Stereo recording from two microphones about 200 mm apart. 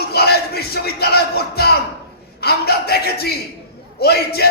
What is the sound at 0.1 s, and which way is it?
Music, 55° left (ahead or behind).